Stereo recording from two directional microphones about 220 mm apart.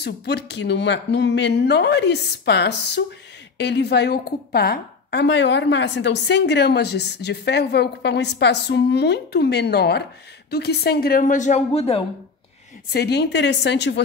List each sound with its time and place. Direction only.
0.0 s a woman's voice: 50° left (ahead or behind); by 12.0 s 25° left (ahead or behind)
12.9 s a woman's voice: 50° left (ahead or behind)